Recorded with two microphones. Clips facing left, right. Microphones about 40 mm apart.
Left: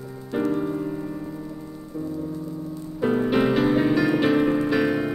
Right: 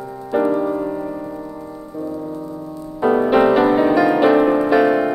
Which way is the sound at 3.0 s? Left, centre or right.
Centre.